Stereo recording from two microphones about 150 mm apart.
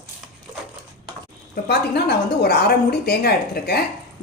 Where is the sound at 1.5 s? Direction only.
90° left.